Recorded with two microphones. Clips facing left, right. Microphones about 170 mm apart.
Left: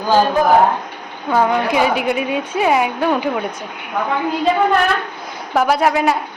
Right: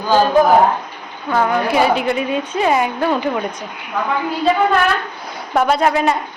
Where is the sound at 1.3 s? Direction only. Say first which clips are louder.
Left 1 dB; 15° left (ahead or behind).